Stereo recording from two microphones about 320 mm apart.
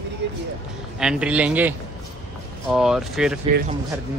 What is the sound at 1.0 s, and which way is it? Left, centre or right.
A man's voice, centre.